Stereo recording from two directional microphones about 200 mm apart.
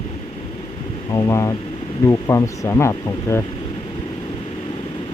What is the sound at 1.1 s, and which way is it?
Speech, 15° left (ahead or behind).